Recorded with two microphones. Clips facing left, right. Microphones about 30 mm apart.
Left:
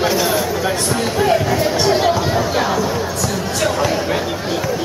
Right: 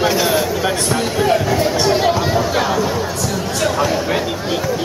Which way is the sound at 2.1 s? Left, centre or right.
Centre.